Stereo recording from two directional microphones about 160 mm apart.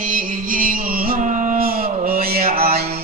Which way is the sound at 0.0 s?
55° right (ahead or behind).